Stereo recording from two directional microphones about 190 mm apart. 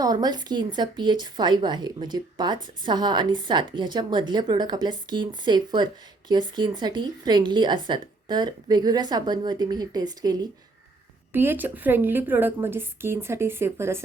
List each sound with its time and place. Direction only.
0.0 s a woman's voice: 20° right (ahead or behind)